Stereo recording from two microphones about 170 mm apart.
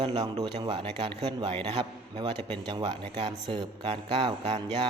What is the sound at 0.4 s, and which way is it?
A man's voice, 30° right (ahead or behind).